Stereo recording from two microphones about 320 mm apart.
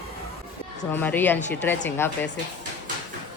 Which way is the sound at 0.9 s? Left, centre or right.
Centre.